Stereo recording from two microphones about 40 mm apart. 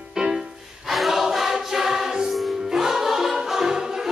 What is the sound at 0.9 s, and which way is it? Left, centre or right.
Music, centre.